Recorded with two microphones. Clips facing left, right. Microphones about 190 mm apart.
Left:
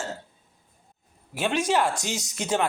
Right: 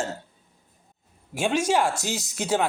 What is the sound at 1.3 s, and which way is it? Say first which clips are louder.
Speech: right 1 dB; 10° right (ahead or behind).